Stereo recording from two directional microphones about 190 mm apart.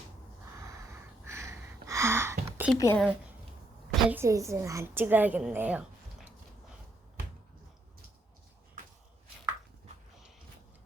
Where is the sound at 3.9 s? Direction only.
10° right (ahead or behind).